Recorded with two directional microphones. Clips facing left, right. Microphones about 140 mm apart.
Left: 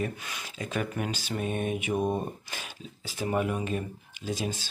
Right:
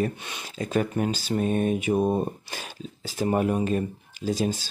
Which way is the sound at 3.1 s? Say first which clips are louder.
Right 5 dB; 40° right (ahead or behind).